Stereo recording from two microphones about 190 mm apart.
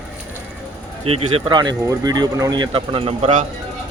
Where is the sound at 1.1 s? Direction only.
30° right (ahead or behind).